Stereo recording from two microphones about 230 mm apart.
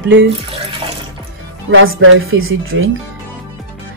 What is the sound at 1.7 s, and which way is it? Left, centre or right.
Speech, right.